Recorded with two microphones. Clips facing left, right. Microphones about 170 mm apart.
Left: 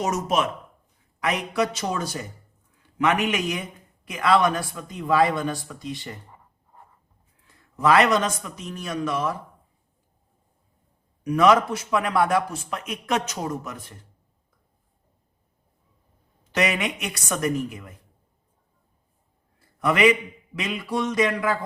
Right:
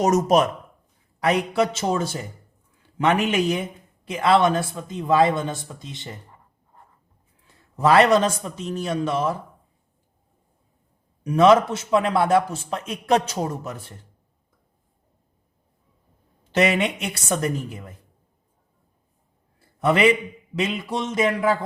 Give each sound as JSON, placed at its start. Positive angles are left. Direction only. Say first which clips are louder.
{"t": 0.0, "sound": "a man's voice", "louder": "right 6 dB", "side_deg": -40}
{"t": 7.8, "sound": "a man's voice", "louder": "right 3 dB", "side_deg": -30}
{"t": 11.2, "sound": "a man's voice", "louder": "right 3 dB", "side_deg": -25}
{"t": 16.5, "sound": "a man's voice", "louder": "right 4 dB", "side_deg": -30}
{"t": 19.5, "sound": "a sound", "louder": "right 2 dB", "side_deg": -30}
{"t": 20.6, "sound": "a man's voice", "louder": "right 1 dB", "side_deg": -25}